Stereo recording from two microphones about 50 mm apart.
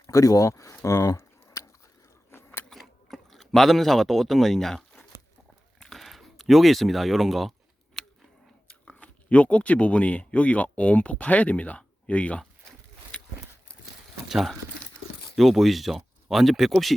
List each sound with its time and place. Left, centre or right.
0.1 s speech: left
2.3 s biting: left
2.7 s a sound: centre
5.8 s speech: centre
8.0 s a sound: centre
8.6 s speech: left
11.8 s a sound: left
13.1 s horse: centre
14.3 s speech: centre